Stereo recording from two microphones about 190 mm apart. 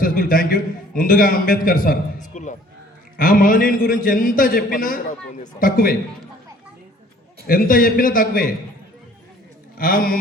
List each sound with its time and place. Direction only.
0.0 s a man's voice: 45° left (ahead or behind)
7.4 s a man's voice: 50° left (ahead or behind)
9.7 s a man's voice: 50° left (ahead or behind)